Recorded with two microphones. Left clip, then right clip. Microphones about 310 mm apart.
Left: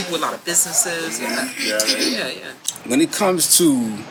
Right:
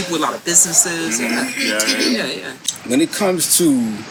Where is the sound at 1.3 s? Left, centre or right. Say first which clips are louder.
Even; right.